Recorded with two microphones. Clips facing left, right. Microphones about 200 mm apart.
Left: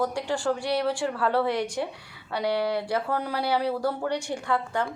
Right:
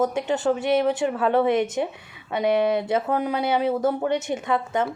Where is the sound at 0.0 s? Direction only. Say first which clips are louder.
Right 4 dB; 20° right (ahead or behind).